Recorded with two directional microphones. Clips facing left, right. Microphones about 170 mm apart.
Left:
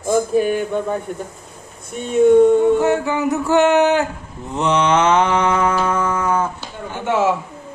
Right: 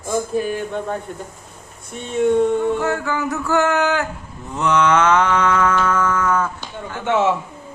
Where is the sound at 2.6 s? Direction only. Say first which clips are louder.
Left 5 dB; 20° left (ahead or behind).